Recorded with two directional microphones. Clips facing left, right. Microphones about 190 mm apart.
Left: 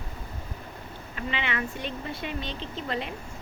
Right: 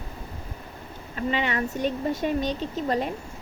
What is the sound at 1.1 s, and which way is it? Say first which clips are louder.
Speech: right 6 dB; 40° right (ahead or behind).